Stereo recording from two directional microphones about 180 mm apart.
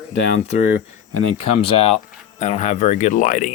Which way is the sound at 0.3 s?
40° left (ahead or behind).